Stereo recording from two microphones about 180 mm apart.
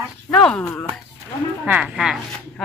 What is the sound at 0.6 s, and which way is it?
Speech, 20° left (ahead or behind).